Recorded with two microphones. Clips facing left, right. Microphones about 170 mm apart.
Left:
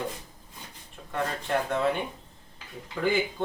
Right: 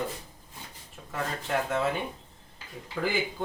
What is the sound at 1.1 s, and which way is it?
Speech, 5° right (ahead or behind).